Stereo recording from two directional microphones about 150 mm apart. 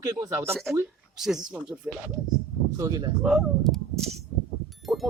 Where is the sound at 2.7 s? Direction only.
25° right (ahead or behind).